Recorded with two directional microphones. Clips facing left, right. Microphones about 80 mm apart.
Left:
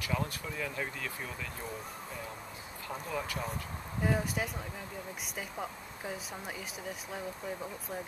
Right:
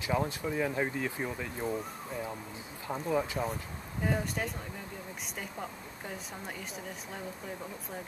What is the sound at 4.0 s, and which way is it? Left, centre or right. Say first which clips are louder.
Speech: even; centre.